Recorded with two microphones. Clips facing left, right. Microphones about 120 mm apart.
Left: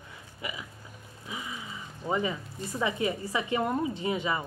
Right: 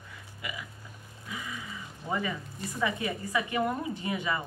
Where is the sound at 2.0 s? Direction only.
20° left (ahead or behind).